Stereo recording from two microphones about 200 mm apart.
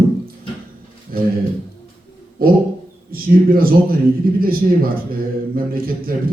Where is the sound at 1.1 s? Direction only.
45° right (ahead or behind).